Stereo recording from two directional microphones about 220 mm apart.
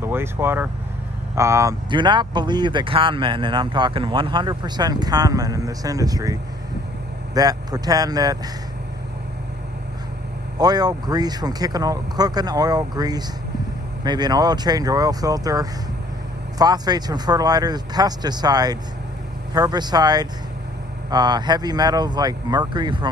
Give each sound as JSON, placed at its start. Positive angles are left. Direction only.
{"t": 0.0, "sound": "speech", "side_deg": -10}
{"t": 10.6, "sound": "speech", "side_deg": -20}